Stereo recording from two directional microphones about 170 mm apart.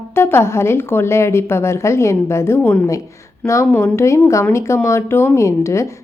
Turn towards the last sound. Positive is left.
turn(degrees=15)  # may be behind; listen again after turning